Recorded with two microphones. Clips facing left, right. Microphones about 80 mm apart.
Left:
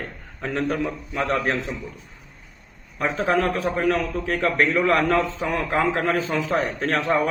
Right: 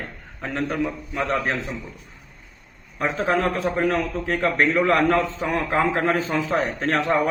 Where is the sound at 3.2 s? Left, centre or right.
Right.